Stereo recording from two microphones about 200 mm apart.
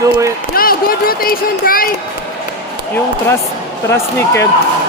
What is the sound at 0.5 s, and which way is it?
Speech, 45° left (ahead or behind).